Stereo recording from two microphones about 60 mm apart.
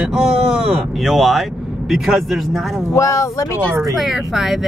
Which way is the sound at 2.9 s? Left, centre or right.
Left.